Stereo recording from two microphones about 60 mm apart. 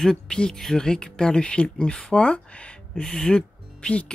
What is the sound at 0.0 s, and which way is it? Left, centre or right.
Speech, centre.